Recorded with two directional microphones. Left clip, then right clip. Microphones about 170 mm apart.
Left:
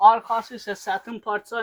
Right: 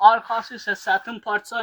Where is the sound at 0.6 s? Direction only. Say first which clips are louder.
Right 5 dB; 20° right (ahead or behind).